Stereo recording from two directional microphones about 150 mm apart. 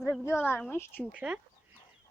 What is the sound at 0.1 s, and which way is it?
Speech, 15° left (ahead or behind).